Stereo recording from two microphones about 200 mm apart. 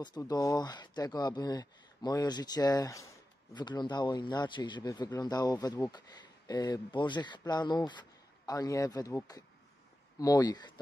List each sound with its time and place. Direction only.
0.0 s speech: 20° left (ahead or behind)